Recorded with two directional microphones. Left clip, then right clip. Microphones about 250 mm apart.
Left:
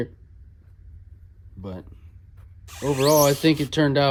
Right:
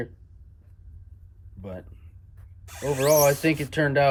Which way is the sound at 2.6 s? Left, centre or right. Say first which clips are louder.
Left 2 dB; centre.